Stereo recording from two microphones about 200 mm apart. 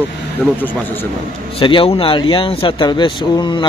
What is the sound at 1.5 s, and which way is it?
Speech, 25° left (ahead or behind).